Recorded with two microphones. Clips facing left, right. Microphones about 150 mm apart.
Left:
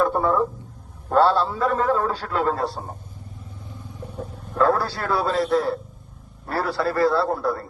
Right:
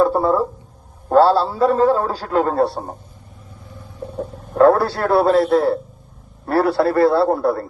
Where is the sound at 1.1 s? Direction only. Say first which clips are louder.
Right 5 dB; 35° right (ahead or behind).